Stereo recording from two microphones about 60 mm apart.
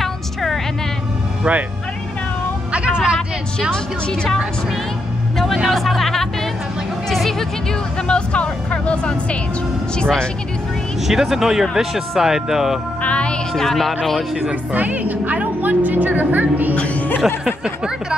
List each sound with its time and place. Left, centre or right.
0.0 s a sound: centre
2.7 s vehicle: centre
3.7 s speech: centre
5.7 s speech: centre
7.1 s music: centre
8.1 s speech: centre
11.1 s speech: centre
13.0 s music: centre
13.6 s speech: centre
14.5 s a woman's voice: right
16.7 s speech: left
17.5 s speech: centre